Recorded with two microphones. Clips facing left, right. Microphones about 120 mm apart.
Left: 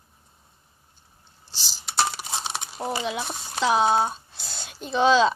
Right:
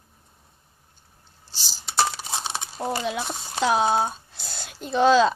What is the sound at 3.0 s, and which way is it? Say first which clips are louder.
Speech: right 1 dB; 45° right (ahead or behind).